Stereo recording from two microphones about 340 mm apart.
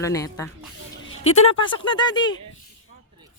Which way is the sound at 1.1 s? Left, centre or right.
Left.